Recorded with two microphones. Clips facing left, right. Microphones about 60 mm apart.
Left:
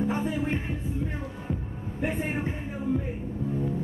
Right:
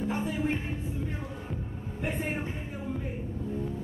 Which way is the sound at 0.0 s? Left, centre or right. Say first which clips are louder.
Left 4 dB; left.